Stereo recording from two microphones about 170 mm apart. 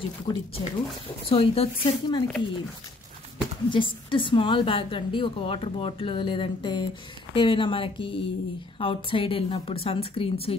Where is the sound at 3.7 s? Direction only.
30° left (ahead or behind).